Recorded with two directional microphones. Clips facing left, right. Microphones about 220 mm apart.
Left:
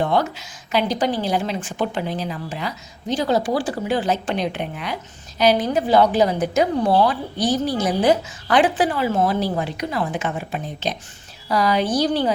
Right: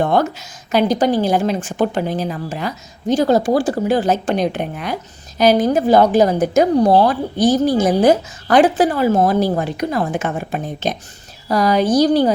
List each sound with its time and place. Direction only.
0.0 s a woman's voice: 50° right (ahead or behind)